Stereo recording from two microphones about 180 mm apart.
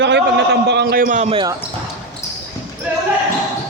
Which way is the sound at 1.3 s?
25° right (ahead or behind).